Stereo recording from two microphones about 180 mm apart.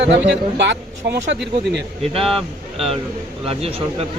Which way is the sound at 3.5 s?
35° right (ahead or behind).